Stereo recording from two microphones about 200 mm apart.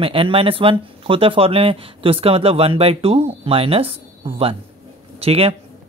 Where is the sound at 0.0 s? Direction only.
25° right (ahead or behind).